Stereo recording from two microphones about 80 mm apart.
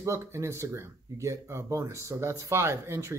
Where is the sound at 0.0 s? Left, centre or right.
Right.